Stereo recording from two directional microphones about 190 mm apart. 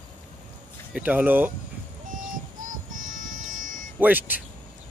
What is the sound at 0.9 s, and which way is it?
Speech, 10° right (ahead or behind).